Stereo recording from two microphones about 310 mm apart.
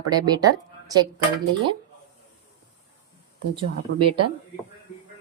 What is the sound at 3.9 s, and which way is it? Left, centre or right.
Speech, right.